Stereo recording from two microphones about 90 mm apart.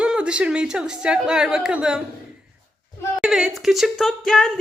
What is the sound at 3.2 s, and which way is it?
Speech, 5° right (ahead or behind).